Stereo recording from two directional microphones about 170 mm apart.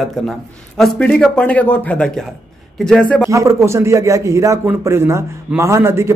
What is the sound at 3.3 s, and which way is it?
A man's voice, 15° right (ahead or behind).